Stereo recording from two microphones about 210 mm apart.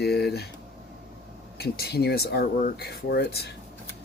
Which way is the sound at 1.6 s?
50° left (ahead or behind).